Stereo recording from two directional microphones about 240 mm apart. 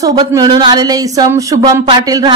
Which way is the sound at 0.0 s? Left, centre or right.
Centre.